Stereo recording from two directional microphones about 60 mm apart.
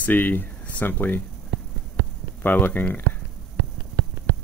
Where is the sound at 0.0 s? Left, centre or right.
Left.